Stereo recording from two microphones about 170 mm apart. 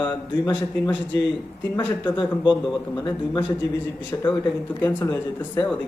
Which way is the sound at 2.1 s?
25° left (ahead or behind).